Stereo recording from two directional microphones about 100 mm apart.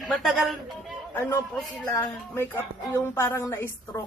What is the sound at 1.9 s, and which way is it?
A woman's voice, 25° left (ahead or behind).